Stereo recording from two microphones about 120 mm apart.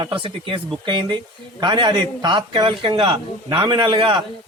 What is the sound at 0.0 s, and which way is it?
A man's voice, 45° right (ahead or behind).